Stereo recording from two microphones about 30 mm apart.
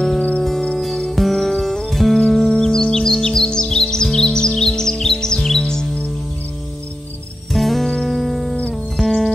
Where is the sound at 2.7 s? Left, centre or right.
Left.